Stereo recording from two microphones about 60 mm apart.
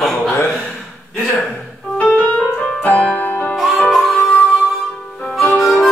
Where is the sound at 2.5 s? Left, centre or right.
Centre.